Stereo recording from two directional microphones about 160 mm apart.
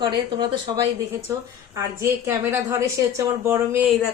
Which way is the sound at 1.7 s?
15° right (ahead or behind).